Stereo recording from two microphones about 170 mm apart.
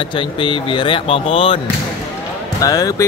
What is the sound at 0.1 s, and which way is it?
Speech, 30° left (ahead or behind).